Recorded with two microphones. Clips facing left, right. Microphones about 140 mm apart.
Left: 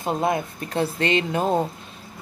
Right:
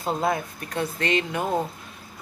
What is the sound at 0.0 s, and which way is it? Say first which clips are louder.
Speech: left 2 dB; 25° left (ahead or behind).